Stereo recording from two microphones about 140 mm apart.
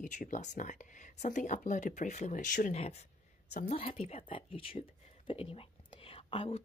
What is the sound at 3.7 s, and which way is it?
Speech, 45° left (ahead or behind).